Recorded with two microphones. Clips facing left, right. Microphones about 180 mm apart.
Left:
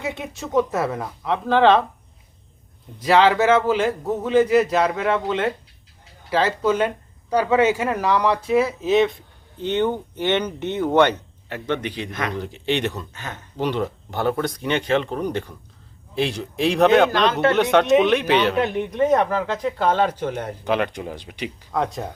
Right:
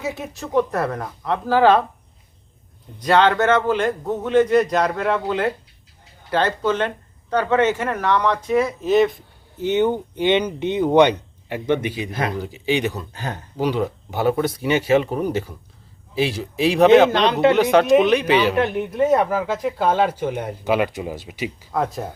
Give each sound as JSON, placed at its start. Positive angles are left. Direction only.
{"t": 0.0, "sound": "speech", "side_deg": 0}
{"t": 3.0, "sound": "speech", "side_deg": 5}
{"t": 13.1, "sound": "speech", "side_deg": -35}
{"t": 13.6, "sound": "speech", "side_deg": 0}
{"t": 17.1, "sound": "speech", "side_deg": -20}
{"t": 17.6, "sound": "speech", "side_deg": 0}